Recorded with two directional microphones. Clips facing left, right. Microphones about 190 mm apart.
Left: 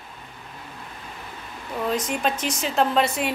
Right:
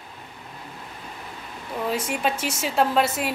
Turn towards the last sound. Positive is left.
turn(degrees=-5)  # may be behind; listen again after turning